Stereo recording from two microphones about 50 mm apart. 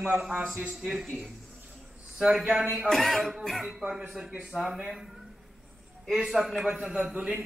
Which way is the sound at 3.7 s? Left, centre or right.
Centre.